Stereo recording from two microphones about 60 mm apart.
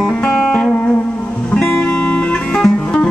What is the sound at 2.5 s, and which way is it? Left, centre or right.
Music, centre.